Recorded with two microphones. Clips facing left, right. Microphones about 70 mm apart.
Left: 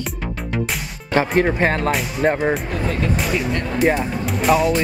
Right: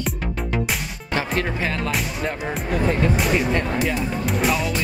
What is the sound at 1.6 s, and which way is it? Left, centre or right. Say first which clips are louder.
Speech: left 6 dB; left.